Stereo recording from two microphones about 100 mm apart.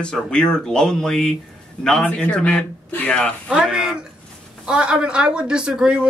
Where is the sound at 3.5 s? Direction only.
5° right (ahead or behind).